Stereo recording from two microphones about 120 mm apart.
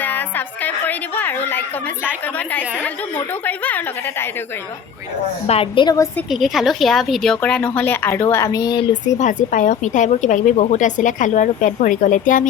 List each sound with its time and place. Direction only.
0.0 s a sound: 15° left (ahead or behind)
2.2 s a woman's voice: 15° left (ahead or behind)
5.5 s a woman's voice: 50° left (ahead or behind)
6.3 s a woman's voice: centre (ahead or behind); by 8.8 s 30° left (ahead or behind)
9.1 s a woman's voice: 90° left